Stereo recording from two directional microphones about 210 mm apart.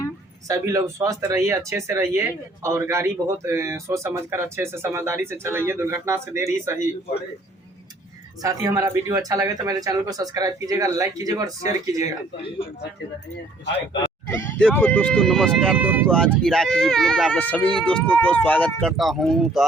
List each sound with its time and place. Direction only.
0.4 s speech: 15° right (ahead or behind)
8.4 s speech: 15° right (ahead or behind)
14.3 s speech: 10° left (ahead or behind)